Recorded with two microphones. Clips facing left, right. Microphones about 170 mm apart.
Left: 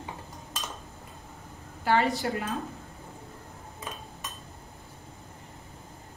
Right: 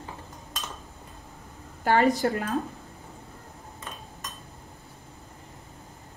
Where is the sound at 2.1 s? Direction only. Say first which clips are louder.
Right 4 dB; 40° right (ahead or behind).